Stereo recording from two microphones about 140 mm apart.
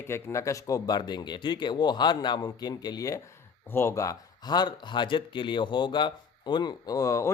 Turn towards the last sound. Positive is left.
turn(degrees=20)  # may be behind; listen again after turning